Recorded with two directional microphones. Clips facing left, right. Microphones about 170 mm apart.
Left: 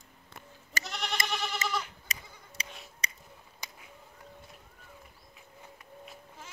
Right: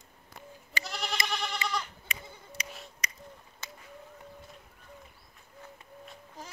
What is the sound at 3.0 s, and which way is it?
Finger snapping, 30° left (ahead or behind).